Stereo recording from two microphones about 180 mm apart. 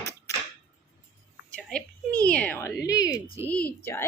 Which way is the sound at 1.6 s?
5° left (ahead or behind).